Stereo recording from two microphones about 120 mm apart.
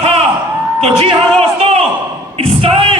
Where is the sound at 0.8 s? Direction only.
55° right (ahead or behind).